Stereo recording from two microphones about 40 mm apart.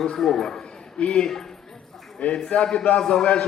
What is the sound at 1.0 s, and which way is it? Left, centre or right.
Speech, left.